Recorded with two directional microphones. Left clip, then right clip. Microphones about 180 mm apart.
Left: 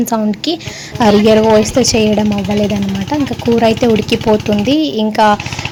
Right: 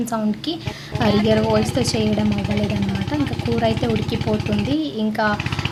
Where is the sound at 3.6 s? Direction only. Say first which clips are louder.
Left 9 dB; 35° left (ahead or behind).